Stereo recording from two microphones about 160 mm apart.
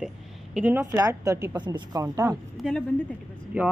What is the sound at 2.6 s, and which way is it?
Speech, centre (ahead or behind).